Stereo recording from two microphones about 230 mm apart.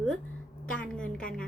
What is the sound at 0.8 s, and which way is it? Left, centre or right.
Speech, centre.